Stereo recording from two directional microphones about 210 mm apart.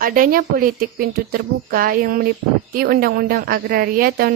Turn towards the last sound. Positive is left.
turn(degrees=-45)  # may be behind; listen again after turning